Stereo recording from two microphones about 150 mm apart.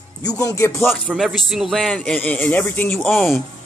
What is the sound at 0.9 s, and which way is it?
Speech, centre (ahead or behind).